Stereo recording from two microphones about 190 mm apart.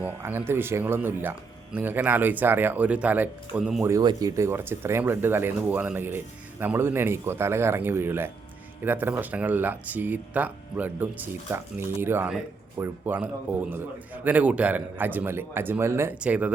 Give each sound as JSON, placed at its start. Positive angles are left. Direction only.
{"t": 0.2, "sound": "speech", "side_deg": -10}
{"t": 3.8, "sound": "speech", "side_deg": -20}